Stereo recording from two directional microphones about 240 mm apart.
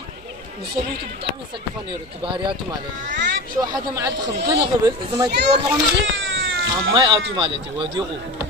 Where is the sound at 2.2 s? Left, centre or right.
Centre.